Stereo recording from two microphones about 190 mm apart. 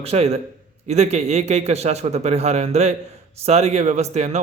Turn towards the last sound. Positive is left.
turn(degrees=-35)  # may be behind; listen again after turning